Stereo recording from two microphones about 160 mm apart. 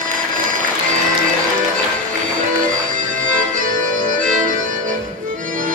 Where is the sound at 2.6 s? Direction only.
55° right (ahead or behind).